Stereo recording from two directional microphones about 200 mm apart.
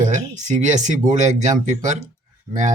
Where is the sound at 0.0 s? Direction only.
40° right (ahead or behind).